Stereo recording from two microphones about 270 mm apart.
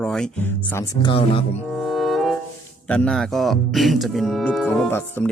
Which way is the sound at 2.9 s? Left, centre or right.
Centre.